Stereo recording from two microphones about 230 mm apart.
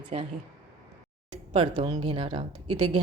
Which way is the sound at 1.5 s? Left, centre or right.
Right.